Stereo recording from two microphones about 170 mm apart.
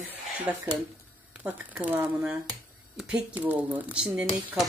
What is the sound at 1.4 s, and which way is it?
Speech, 10° right (ahead or behind).